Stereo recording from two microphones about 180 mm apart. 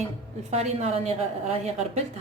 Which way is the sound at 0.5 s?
40° right (ahead or behind).